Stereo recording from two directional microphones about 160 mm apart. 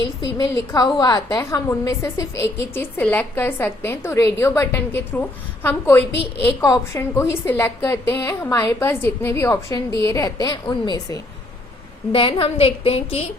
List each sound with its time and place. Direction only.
0.3 s a woman's voice: 25° left (ahead or behind)